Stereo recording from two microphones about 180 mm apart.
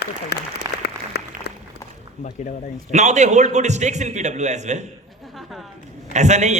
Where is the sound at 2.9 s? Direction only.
40° right (ahead or behind).